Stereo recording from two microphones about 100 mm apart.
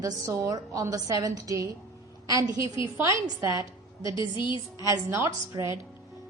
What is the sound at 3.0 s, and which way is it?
Speech, 35° right (ahead or behind).